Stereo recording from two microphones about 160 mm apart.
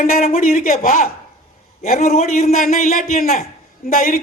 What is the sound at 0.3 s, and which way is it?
A woman's voice, 55° left (ahead or behind).